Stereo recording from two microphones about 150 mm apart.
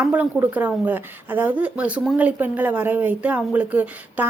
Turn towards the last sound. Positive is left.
turn(degrees=-10)  # may be behind; listen again after turning